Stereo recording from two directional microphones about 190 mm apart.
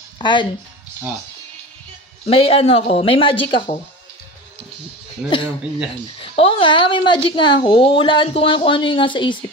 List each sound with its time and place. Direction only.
0.2 s speech: 25° left (ahead or behind)
2.2 s a woman's voice: 30° left (ahead or behind)
5.2 s speech: 5° right (ahead or behind)
6.2 s a woman's voice: 30° left (ahead or behind)